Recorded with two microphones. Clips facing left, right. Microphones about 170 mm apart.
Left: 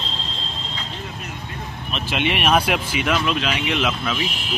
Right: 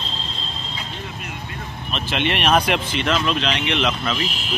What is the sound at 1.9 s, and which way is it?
Speech, 5° left (ahead or behind).